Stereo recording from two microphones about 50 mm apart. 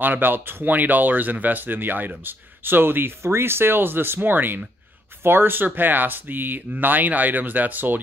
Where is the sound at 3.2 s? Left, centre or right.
Right.